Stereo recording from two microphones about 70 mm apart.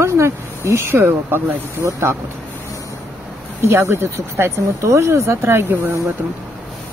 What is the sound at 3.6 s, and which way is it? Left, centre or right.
Speech, right.